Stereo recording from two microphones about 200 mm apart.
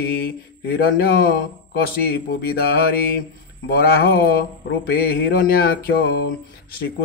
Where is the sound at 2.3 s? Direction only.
50° left (ahead or behind).